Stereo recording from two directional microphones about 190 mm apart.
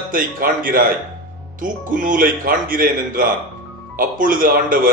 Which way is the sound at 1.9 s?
45° right (ahead or behind).